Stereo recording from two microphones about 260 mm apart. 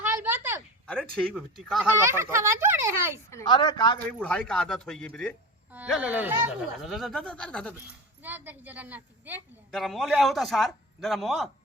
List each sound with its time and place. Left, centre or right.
0.0 s a sound: centre
0.9 s a child's voice: centre
3.2 s speech: centre
4.2 s a woman's voice: centre
5.7 s a woman's voice: centre
8.2 s a woman's voice: centre